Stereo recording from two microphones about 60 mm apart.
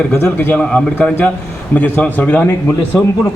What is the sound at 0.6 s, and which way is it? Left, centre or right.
Speech, centre.